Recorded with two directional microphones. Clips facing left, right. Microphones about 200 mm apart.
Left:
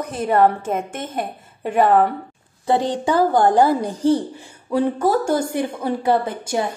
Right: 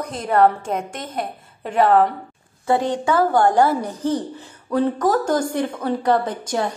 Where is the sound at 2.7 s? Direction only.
30° left (ahead or behind).